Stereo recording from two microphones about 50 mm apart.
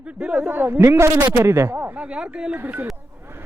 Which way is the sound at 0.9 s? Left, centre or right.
Right.